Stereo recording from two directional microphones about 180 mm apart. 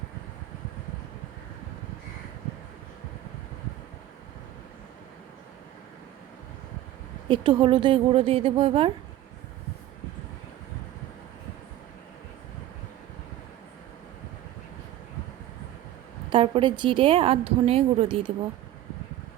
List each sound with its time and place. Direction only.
7.3 s a woman's voice: 25° right (ahead or behind)
16.3 s a woman's voice: 30° right (ahead or behind)